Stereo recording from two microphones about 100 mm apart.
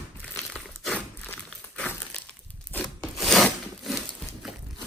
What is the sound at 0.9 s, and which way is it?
Walk, 15° left (ahead or behind).